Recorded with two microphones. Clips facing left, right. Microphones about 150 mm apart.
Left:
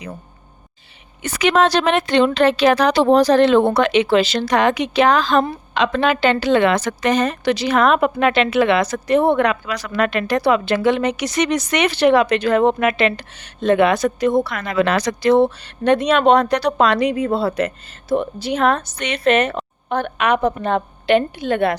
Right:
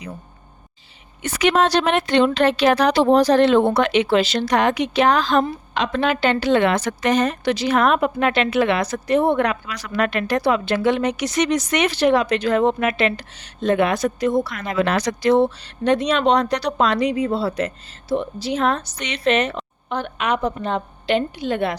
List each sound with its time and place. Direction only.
1.2 s speech: 90° left; by 14.6 s 65° left (ahead or behind)
14.7 s a woman's voice: 90° left; by 21.8 s 55° left (ahead or behind)